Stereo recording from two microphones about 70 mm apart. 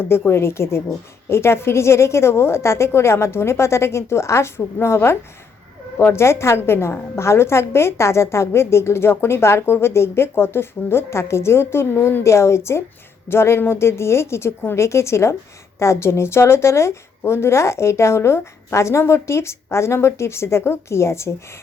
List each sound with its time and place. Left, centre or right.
0.3 s a woman's voice: left